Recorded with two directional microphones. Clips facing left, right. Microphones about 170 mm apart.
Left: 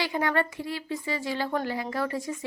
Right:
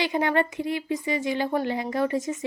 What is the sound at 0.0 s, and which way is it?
A woman's voice, 20° right (ahead or behind).